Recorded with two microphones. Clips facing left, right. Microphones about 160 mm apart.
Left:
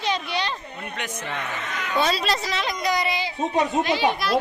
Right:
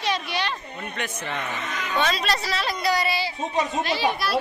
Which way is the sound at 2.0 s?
35° left (ahead or behind).